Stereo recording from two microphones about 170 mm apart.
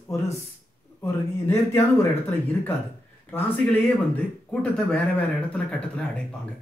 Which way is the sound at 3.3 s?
10° left (ahead or behind).